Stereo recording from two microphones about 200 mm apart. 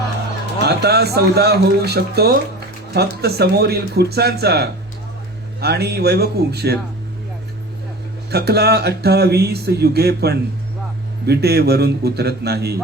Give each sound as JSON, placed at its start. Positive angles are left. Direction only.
{"t": 0.6, "sound": "speech", "side_deg": -55}
{"t": 8.3, "sound": "speech", "side_deg": -55}